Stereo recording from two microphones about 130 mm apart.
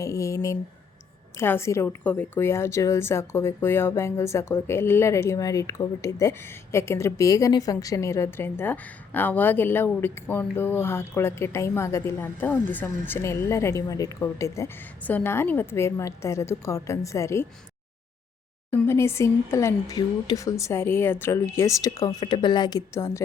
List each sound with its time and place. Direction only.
0.0 s a woman's voice: 25° left (ahead or behind)
18.7 s a woman's voice: 20° left (ahead or behind)
23.0 s a woman's voice: 20° left (ahead or behind)